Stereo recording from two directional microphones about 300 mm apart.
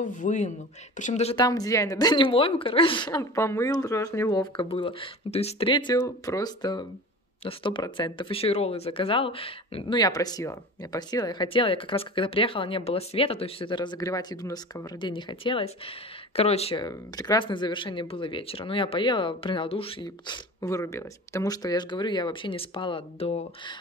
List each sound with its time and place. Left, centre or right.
0.0 s speech: left